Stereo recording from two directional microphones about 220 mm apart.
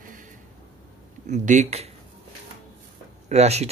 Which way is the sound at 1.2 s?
30° right (ahead or behind).